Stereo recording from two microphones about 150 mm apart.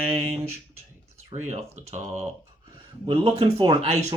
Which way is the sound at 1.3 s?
40° right (ahead or behind).